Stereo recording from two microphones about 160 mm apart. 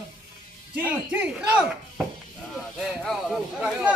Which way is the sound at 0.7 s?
10° right (ahead or behind).